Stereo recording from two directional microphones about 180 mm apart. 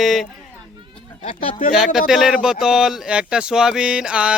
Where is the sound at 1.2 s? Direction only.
35° left (ahead or behind).